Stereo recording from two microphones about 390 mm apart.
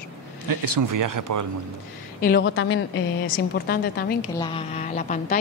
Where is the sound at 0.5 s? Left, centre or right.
Right.